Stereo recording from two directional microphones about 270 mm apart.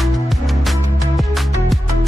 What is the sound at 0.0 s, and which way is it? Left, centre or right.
Music, centre.